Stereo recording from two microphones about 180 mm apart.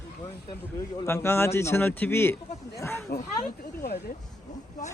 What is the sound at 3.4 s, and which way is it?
Speech, 45° left (ahead or behind).